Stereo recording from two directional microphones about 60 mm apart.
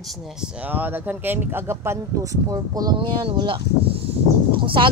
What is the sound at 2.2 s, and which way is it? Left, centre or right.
Speech, right.